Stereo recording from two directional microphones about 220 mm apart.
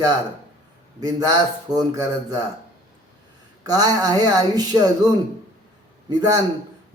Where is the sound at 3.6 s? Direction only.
15° right (ahead or behind).